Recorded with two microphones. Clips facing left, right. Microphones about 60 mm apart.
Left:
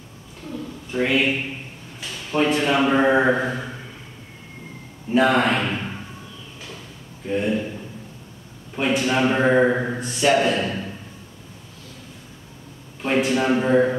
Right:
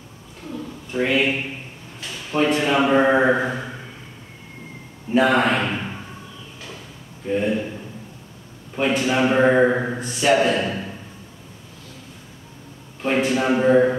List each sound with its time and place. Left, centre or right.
0.9 s a sound: centre
2.0 s a man's voice: centre
5.1 s speech: centre
7.2 s speech: centre
8.7 s speech: centre
13.0 s speech: centre